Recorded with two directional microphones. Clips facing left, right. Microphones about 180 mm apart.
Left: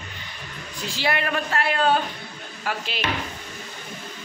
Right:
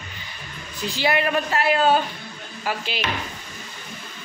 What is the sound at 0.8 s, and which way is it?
A man's voice, centre (ahead or behind).